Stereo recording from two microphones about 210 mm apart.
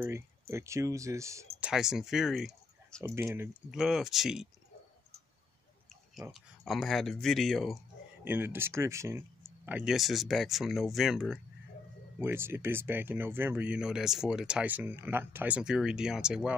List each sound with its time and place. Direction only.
0.0 s speech: 10° right (ahead or behind)
1.6 s speech: 5° right (ahead or behind)
6.3 s speech: centre (ahead or behind)
8.2 s speech: 10° right (ahead or behind)